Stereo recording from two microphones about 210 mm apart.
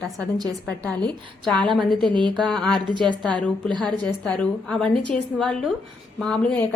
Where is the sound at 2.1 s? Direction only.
20° right (ahead or behind).